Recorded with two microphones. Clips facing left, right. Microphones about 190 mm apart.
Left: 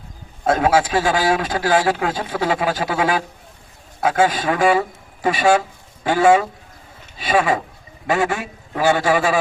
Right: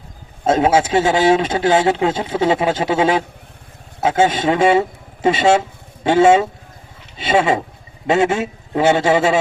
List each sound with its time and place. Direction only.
0.4 s a man's voice: 25° right (ahead or behind)